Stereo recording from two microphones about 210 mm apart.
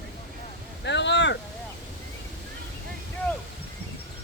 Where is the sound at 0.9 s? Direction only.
55° left (ahead or behind).